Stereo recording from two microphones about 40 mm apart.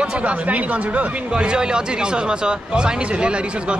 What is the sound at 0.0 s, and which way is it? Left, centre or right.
Speech, right.